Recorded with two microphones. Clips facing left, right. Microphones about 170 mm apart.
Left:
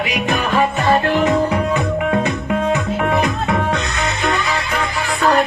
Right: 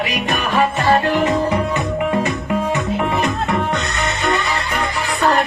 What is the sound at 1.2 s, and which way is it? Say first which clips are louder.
Music: left 1 dB; 5° left (ahead or behind).